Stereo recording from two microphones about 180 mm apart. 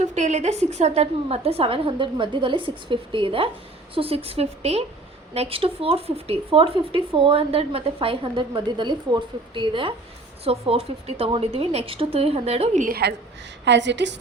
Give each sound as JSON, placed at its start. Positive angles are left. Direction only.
{"t": 0.0, "sound": "speech", "side_deg": -40}
{"t": 13.7, "sound": "a woman's voice", "side_deg": -75}